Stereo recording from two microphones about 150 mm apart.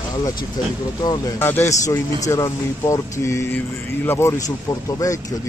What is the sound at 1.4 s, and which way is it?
A man's voice, 15° left (ahead or behind).